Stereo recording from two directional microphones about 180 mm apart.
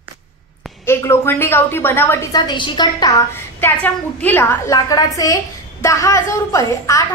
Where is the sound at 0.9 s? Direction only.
15° left (ahead or behind).